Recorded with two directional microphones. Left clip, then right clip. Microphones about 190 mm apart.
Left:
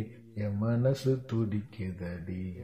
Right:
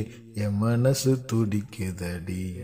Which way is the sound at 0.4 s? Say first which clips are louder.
Right 5 dB; 45° right (ahead or behind).